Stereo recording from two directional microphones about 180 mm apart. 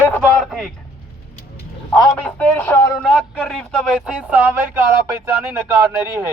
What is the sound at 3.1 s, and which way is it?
Speech, centre (ahead or behind).